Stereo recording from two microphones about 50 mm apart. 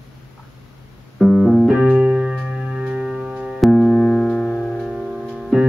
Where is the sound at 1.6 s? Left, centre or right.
Right.